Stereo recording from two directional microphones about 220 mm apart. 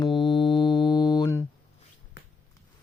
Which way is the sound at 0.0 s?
20° left (ahead or behind).